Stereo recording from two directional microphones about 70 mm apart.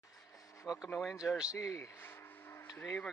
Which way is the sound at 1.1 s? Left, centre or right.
Centre.